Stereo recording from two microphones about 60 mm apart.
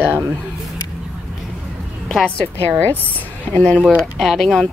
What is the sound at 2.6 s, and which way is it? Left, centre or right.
Speech, left.